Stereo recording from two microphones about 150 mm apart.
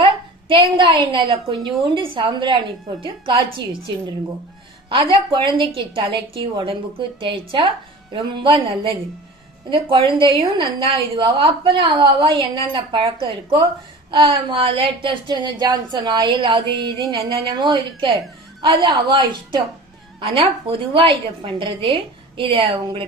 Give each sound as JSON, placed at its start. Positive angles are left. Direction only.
{"t": 0.0, "sound": "speech", "side_deg": -35}
{"t": 5.1, "sound": "speech", "side_deg": -35}